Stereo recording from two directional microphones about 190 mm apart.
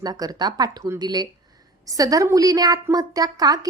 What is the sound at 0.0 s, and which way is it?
A woman's voice, 20° right (ahead or behind).